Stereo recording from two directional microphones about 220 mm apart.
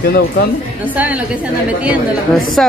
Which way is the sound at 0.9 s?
5° right (ahead or behind).